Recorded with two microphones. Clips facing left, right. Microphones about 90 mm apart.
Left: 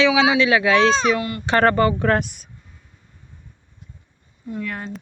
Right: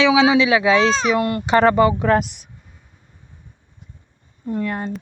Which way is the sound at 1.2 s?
50° right (ahead or behind).